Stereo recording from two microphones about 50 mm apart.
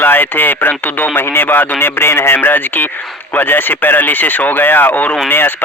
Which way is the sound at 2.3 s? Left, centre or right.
Left.